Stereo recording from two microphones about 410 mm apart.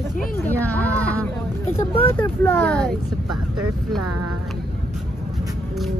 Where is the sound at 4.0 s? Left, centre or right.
Right.